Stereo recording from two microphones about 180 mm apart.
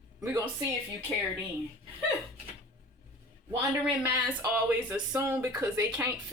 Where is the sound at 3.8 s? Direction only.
10° right (ahead or behind).